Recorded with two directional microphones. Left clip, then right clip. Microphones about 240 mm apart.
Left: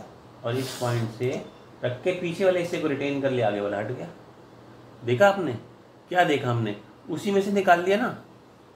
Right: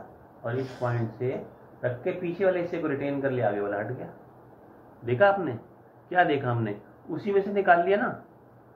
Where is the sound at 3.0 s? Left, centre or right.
Left.